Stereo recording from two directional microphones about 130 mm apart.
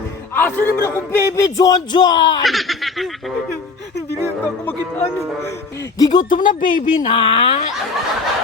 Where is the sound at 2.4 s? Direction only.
Centre (ahead or behind).